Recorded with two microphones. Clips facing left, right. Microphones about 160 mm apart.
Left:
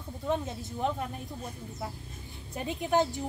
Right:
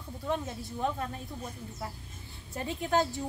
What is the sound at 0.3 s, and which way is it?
Speech, 20° left (ahead or behind).